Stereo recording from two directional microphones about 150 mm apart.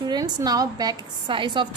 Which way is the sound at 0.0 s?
25° right (ahead or behind).